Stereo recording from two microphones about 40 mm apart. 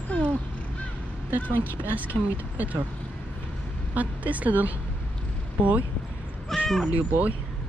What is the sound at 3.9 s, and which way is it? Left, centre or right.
Speech, right.